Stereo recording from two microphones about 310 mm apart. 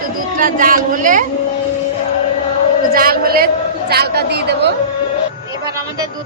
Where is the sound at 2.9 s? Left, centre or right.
Right.